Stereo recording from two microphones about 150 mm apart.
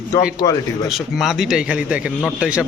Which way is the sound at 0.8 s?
Centre (ahead or behind).